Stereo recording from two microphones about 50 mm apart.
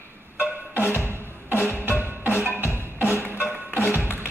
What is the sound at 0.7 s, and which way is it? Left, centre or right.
Music, left.